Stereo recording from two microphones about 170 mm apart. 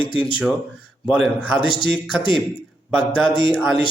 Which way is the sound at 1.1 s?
5° right (ahead or behind).